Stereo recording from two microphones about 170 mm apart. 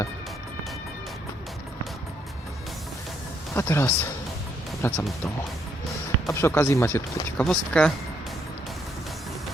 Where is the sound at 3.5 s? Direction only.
15° left (ahead or behind).